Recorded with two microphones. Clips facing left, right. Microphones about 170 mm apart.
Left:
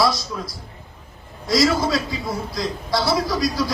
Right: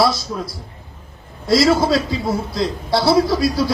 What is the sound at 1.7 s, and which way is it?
A man's voice, 25° right (ahead or behind).